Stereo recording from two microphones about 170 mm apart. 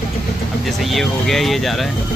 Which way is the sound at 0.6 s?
Centre (ahead or behind).